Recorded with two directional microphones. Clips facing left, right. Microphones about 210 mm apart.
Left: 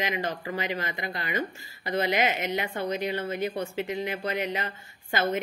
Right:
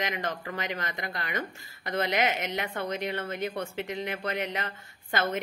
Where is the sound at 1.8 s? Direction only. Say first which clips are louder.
Left 2 dB; 5° left (ahead or behind).